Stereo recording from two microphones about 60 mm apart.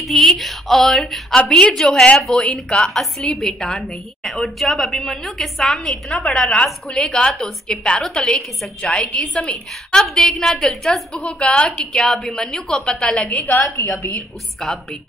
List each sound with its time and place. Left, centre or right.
0.0 s a woman's voice: centre
1.3 s a woman's voice: centre
10.0 s a woman's voice: centre
14.6 s a woman's voice: centre